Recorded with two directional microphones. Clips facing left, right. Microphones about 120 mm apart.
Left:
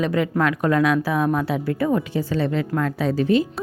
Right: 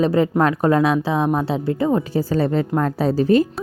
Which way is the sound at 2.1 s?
40° right (ahead or behind).